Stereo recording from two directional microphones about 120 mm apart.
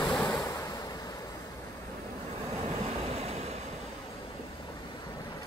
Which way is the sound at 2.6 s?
65° right (ahead or behind).